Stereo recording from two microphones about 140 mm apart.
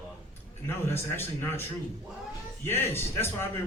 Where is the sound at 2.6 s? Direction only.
15° left (ahead or behind).